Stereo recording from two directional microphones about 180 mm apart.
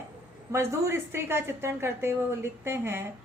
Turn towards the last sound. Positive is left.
turn(degrees=-15)  # may be behind; listen again after turning